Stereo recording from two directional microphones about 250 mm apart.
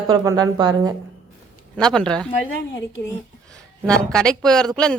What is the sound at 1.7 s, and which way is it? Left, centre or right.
Speech, centre.